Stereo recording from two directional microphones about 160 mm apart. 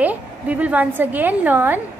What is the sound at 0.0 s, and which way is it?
A woman's voice, 10° right (ahead or behind).